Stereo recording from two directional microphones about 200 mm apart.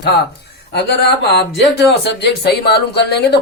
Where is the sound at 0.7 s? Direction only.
55° left (ahead or behind).